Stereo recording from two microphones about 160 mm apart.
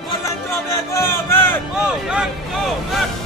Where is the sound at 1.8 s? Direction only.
5° right (ahead or behind).